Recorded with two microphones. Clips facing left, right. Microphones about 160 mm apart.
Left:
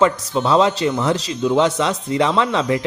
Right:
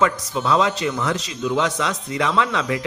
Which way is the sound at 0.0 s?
30° left (ahead or behind).